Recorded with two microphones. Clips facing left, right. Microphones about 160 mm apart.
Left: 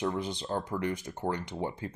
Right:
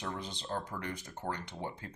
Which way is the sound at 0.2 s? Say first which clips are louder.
Left 6 dB; 15° left (ahead or behind).